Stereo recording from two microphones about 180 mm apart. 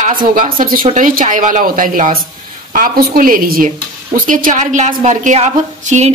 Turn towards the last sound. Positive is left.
turn(degrees=-40)  # may be behind; listen again after turning